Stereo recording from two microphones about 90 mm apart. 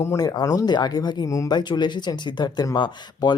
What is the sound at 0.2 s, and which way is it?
Speech, 45° left (ahead or behind).